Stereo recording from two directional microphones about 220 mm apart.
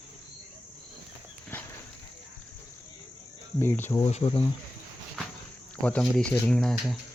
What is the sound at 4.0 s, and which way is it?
Speech, 25° left (ahead or behind).